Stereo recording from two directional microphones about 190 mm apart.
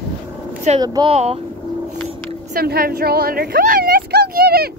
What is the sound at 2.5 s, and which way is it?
A woman's voice, 50° right (ahead or behind).